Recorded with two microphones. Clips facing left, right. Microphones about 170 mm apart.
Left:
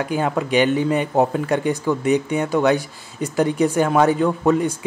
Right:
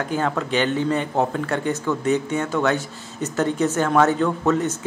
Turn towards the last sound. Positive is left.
turn(degrees=15)  # may be behind; listen again after turning